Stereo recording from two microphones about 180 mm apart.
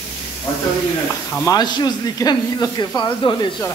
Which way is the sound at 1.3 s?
20° left (ahead or behind).